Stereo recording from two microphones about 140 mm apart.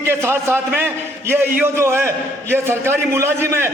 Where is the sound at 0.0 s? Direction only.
15° right (ahead or behind).